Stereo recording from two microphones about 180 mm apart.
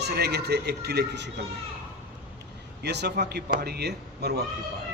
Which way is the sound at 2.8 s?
70° right (ahead or behind).